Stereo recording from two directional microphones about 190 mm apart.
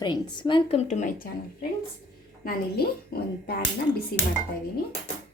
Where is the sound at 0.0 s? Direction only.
25° left (ahead or behind); by 1.3 s 40° left (ahead or behind).